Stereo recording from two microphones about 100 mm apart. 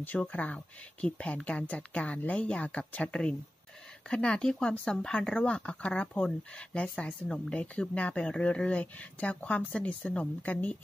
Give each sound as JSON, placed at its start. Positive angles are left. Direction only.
{"t": 0.0, "sound": "speech", "side_deg": 15}